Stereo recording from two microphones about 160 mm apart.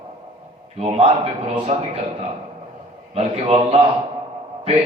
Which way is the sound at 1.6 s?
40° right (ahead or behind).